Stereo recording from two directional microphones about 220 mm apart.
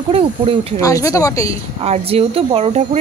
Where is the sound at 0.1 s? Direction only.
25° right (ahead or behind).